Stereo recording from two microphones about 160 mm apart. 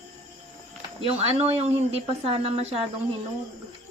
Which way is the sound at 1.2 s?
40° right (ahead or behind).